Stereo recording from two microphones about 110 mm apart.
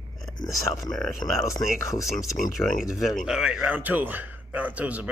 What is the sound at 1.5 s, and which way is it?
Speech, 30° left (ahead or behind).